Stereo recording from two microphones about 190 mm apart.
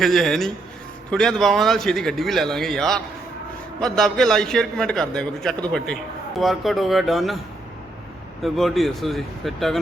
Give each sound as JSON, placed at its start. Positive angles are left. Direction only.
{"t": 0.0, "sound": "a man's voice", "side_deg": 0}
{"t": 8.4, "sound": "a man's voice", "side_deg": 0}